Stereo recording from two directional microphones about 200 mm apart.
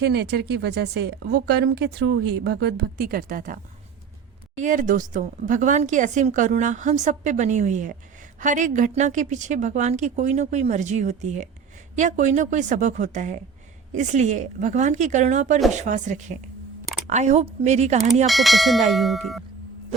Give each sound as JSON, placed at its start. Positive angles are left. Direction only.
{"t": 0.0, "sound": "a woman's voice", "side_deg": -55}
{"t": 18.3, "sound": "speech", "side_deg": 0}